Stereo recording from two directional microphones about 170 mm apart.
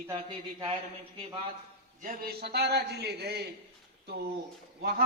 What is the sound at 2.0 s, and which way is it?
A man's voice, 55° right (ahead or behind).